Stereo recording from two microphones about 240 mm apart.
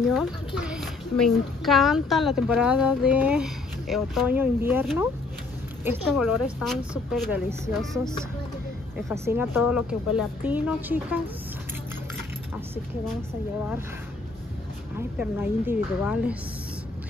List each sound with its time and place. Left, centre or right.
0.6 s a woman's voice: centre
8.9 s speech: centre
15.0 s speech: centre